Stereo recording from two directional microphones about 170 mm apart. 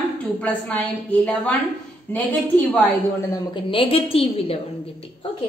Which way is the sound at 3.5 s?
30° left (ahead or behind).